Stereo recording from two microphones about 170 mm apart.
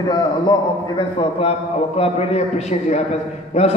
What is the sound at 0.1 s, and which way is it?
A man's voice, 25° left (ahead or behind).